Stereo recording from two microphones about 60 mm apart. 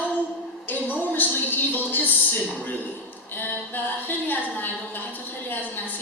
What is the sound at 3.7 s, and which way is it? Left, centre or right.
A man's voice, left.